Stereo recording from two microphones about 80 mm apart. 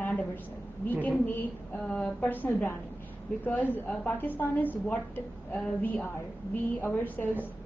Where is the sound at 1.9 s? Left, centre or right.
Centre.